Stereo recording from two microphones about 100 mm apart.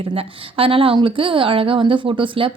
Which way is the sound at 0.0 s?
70° right (ahead or behind).